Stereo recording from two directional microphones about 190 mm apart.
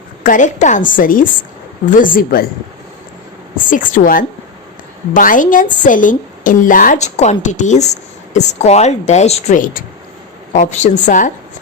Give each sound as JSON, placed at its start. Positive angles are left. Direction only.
{"t": 0.2, "sound": "a woman's voice", "side_deg": 45}
{"t": 3.7, "sound": "a woman's voice", "side_deg": 45}